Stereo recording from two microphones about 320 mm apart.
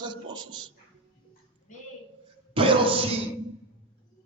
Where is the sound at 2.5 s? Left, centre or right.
Centre.